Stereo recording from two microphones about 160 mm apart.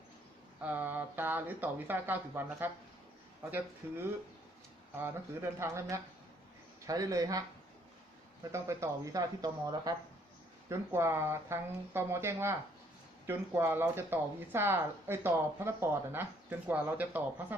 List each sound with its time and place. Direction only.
0.6 s speech: 10° right (ahead or behind)
3.8 s speech: 15° right (ahead or behind)
8.5 s speech: 20° right (ahead or behind)